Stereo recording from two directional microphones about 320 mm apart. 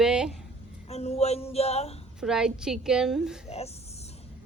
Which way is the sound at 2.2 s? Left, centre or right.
Centre.